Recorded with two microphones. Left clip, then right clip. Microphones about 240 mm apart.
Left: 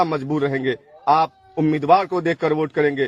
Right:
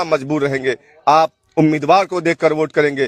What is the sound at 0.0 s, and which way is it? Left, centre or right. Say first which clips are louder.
A man's voice: right 3 dB; right.